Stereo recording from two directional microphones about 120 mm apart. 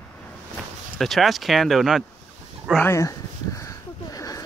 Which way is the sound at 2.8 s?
25° left (ahead or behind).